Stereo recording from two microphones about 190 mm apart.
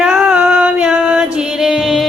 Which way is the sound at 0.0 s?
5° right (ahead or behind).